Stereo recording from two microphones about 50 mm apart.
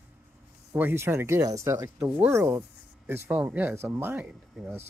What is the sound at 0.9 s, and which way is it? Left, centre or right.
Speech, right.